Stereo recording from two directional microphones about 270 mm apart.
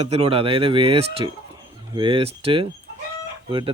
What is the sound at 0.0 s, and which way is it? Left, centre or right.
Speech, right.